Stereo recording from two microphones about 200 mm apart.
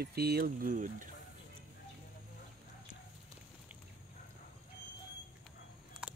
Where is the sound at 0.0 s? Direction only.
55° right (ahead or behind).